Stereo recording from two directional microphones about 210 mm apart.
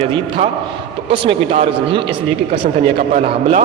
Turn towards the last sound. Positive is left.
turn(degrees=-30)  # may be behind; listen again after turning